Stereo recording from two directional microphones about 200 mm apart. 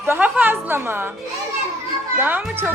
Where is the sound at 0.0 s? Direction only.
10° right (ahead or behind).